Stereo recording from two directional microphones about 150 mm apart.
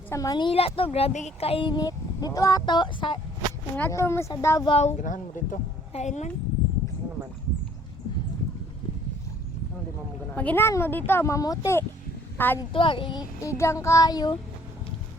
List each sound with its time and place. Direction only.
0.1 s speech: 25° left (ahead or behind)
3.8 s speech: 15° left (ahead or behind)
4.3 s child singing: 20° left (ahead or behind)
4.7 s speech: 45° left (ahead or behind)
5.9 s a woman's voice: 50° left (ahead or behind)
10.3 s speech: 15° left (ahead or behind)
12.7 s speech: 35° left (ahead or behind)
13.4 s child singing: 20° left (ahead or behind)